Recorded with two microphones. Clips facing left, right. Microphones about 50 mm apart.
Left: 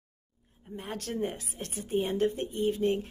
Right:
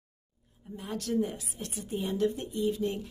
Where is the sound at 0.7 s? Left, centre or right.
Left.